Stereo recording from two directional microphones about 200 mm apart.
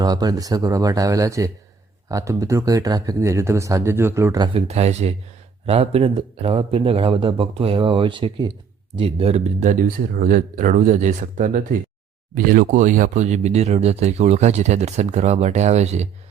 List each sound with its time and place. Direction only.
0.0 s speech: 20° right (ahead or behind)
4.5 s speech: 30° right (ahead or behind)